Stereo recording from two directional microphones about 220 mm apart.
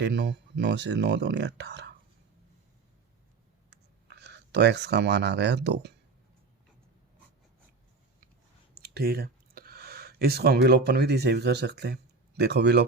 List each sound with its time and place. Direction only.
0.0 s speech: 50° right (ahead or behind)
3.7 s speech: 50° right (ahead or behind)
8.7 s speech: 45° right (ahead or behind)